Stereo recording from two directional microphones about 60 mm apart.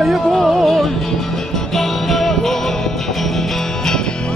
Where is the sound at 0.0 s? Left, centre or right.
Centre.